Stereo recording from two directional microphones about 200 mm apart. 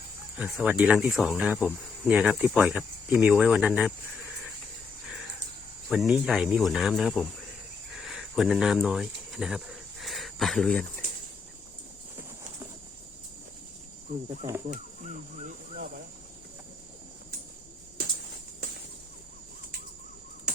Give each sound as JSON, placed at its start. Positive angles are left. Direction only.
{"t": 0.3, "sound": "speech", "side_deg": -5}
{"t": 5.9, "sound": "speech", "side_deg": 0}
{"t": 7.9, "sound": "cricket", "side_deg": 0}
{"t": 14.3, "sound": "speech", "side_deg": -15}
{"t": 14.7, "sound": "speech", "side_deg": -35}